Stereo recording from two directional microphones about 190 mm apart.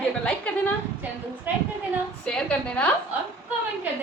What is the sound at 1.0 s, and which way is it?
Speech, 10° right (ahead or behind).